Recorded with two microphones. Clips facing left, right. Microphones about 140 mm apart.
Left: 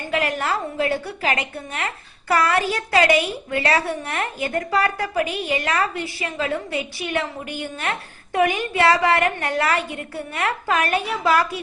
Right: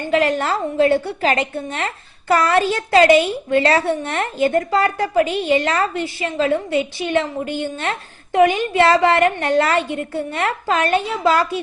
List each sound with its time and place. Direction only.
0.1 s a woman's voice: 30° right (ahead or behind)